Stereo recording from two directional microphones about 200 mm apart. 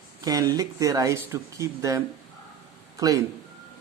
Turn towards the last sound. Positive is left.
turn(degrees=-15)  # may be behind; listen again after turning